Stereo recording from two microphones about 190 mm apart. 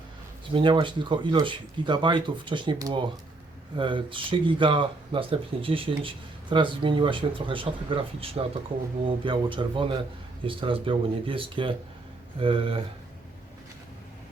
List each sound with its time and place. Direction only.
0.5 s speech: 25° right (ahead or behind)